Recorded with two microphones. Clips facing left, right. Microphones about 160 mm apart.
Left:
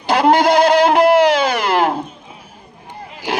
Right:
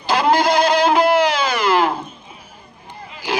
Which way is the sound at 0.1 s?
60° left (ahead or behind).